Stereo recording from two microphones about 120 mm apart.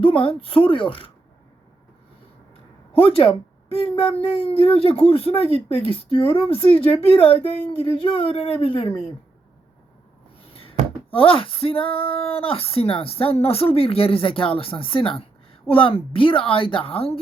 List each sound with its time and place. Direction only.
0.0 s speech: 45° left (ahead or behind)
2.9 s speech: 50° left (ahead or behind)
11.1 s speech: 50° left (ahead or behind)